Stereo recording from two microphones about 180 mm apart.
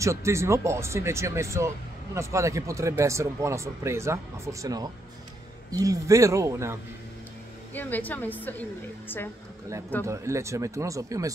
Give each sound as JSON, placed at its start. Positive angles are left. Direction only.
{"t": 0.0, "sound": "speech", "side_deg": -15}
{"t": 7.7, "sound": "a woman's voice", "side_deg": 10}
{"t": 10.0, "sound": "speech", "side_deg": -15}